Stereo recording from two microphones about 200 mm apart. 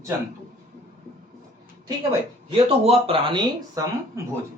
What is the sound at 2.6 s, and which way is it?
Speech, 30° right (ahead or behind).